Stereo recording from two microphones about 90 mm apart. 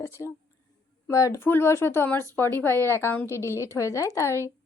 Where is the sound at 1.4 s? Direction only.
25° left (ahead or behind).